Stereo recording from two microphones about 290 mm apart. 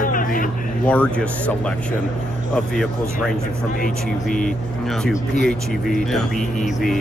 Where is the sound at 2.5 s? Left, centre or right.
Centre.